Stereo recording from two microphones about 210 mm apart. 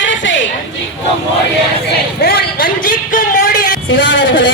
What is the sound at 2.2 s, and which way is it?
Music, 45° left (ahead or behind).